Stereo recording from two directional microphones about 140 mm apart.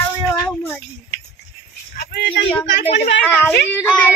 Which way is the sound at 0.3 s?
10° left (ahead or behind).